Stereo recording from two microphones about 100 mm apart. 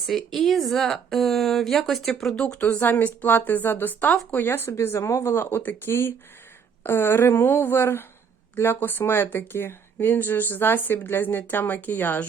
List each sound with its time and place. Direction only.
0.0 s a woman's voice: centre (ahead or behind); by 12.3 s 20° left (ahead or behind)